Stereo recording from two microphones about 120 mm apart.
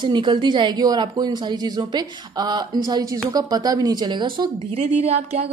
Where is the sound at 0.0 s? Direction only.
40° right (ahead or behind).